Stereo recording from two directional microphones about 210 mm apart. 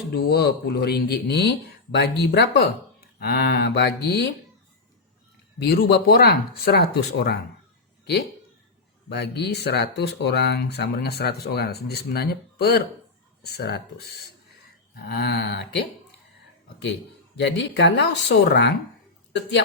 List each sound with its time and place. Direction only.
0.1 s speech: 50° left (ahead or behind)
5.6 s speech: 50° left (ahead or behind)
9.0 s speech: 55° left (ahead or behind)
17.3 s speech: 55° left (ahead or behind)